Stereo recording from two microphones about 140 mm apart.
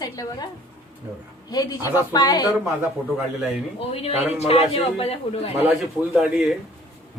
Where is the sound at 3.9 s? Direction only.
45° left (ahead or behind).